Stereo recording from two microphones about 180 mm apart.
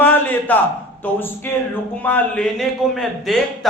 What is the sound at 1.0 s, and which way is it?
A man's voice, 10° left (ahead or behind).